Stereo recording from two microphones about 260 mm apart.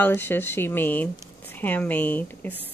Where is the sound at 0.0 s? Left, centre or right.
Centre.